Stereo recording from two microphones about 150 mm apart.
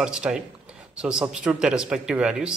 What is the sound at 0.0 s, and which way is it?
Speech, 5° right (ahead or behind).